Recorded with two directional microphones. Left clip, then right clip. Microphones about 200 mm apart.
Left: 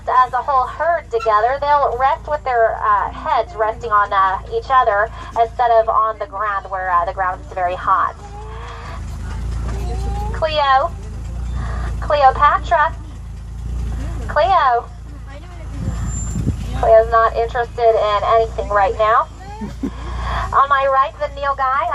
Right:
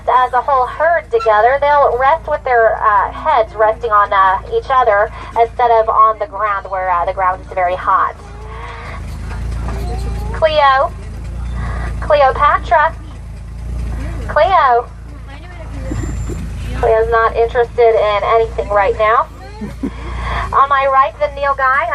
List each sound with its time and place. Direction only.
0.0 s speech: 55° left (ahead or behind)
10.4 s speech: 55° left (ahead or behind)
12.0 s speech: 50° left (ahead or behind)
14.3 s speech: 50° left (ahead or behind)
16.9 s speech: 50° left (ahead or behind)
20.2 s speech: 50° left (ahead or behind)